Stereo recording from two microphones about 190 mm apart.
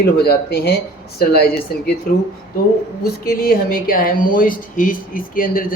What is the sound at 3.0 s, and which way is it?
Speech, 50° left (ahead or behind).